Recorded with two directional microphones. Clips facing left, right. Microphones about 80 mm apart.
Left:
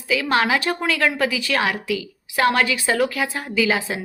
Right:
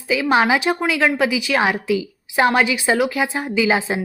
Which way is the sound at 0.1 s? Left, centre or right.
Centre.